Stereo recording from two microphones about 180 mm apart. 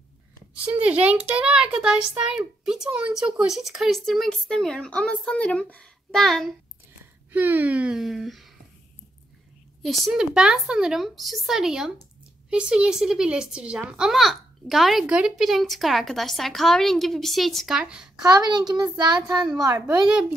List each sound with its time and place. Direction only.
0.7 s a child's voice: 5° right (ahead or behind)
7.3 s a child's voice: 10° right (ahead or behind)
9.8 s a child's voice: centre (ahead or behind)
18.2 s a child's voice: 20° right (ahead or behind)